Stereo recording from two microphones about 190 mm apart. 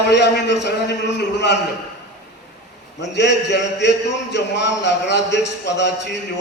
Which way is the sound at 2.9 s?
65° left (ahead or behind).